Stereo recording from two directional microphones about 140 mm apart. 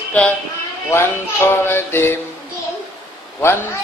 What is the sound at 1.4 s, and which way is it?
Speech, 15° left (ahead or behind).